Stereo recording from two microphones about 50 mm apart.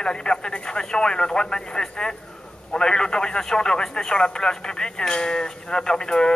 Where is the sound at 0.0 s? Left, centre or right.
Centre.